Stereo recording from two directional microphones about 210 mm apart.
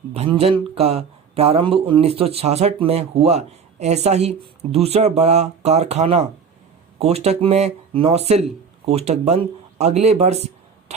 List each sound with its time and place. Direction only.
0.1 s speech: 30° right (ahead or behind)